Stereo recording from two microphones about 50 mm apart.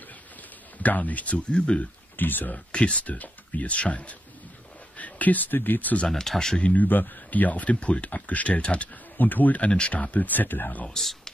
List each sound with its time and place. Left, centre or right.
0.0 s a sound: left
2.1 s speech: left
2.5 s speech: left
6.0 s speech: centre
6.6 s speech: left
9.1 s speech: left
9.7 s speech: left
10.9 s speech: centre